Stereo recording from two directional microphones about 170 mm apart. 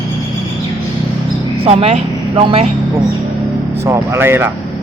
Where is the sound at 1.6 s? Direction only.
40° right (ahead or behind).